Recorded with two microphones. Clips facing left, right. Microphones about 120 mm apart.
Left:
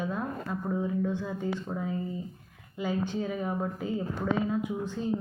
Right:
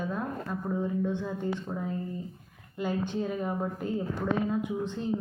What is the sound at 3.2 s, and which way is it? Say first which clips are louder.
Speech: even; centre (ahead or behind).